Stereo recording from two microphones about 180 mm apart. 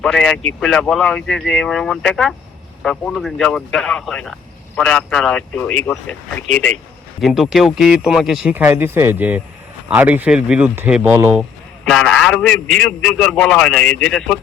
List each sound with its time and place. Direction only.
0.0 s a man's voice: 5° left (ahead or behind)